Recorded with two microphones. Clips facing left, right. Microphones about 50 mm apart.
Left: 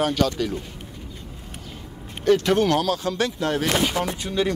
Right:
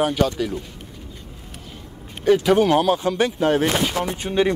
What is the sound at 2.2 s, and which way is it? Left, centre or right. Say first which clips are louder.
Speech: right 3 dB; centre.